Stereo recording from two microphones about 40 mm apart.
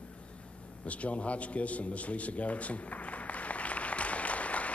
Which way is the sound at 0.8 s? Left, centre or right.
Left.